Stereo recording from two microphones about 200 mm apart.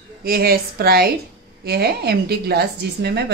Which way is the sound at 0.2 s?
50° right (ahead or behind).